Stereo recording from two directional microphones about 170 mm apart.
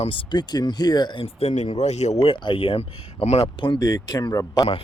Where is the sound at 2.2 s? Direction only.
30° left (ahead or behind).